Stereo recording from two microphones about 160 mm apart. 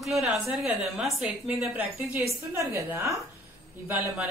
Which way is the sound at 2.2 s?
20° right (ahead or behind).